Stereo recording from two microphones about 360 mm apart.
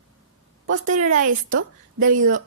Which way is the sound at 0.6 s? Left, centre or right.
Right.